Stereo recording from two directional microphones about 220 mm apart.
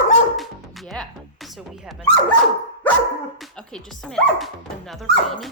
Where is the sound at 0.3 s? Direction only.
Centre (ahead or behind).